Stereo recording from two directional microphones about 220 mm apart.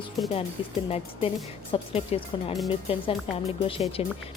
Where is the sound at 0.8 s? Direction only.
30° left (ahead or behind).